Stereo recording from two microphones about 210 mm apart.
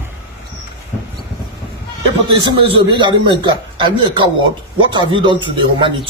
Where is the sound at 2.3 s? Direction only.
25° right (ahead or behind).